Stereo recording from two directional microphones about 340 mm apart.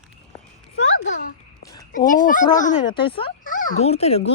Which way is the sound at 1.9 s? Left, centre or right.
Left.